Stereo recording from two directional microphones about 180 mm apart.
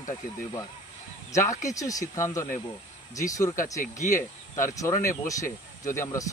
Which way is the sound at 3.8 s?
45° left (ahead or behind).